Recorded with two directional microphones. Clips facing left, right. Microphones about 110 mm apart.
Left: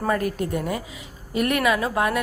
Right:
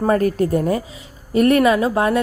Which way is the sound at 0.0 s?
35° right (ahead or behind).